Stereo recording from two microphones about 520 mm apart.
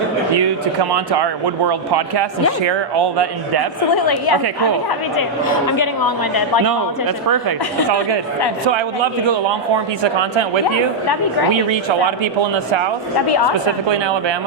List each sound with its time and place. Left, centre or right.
0.3 s speech: right
3.9 s a woman's voice: left
5.5 s a woman's voice: left
7.3 s a woman's voice: right
9.2 s speech: right
11.7 s speech: right
13.8 s speech: right